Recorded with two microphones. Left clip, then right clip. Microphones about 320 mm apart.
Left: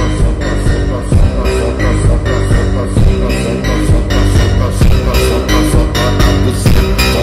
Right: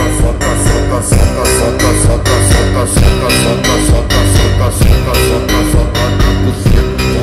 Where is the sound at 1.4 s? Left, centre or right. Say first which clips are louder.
Right 4 dB; right.